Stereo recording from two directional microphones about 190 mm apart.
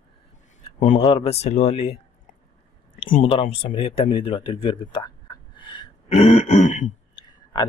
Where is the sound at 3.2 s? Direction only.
25° left (ahead or behind).